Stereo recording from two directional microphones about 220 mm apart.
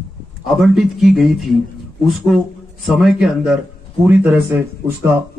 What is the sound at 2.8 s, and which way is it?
Speech, centre (ahead or behind).